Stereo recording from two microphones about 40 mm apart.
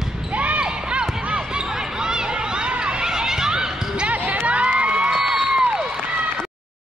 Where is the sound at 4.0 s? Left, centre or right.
Right.